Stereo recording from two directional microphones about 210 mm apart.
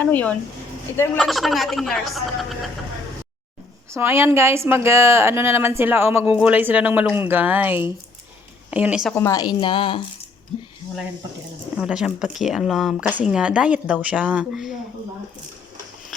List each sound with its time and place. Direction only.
0.0 s speech: 5° left (ahead or behind)
3.8 s a woman's voice: 10° right (ahead or behind)
9.1 s a woman's voice: 15° left (ahead or behind)
11.8 s speech: 5° right (ahead or behind)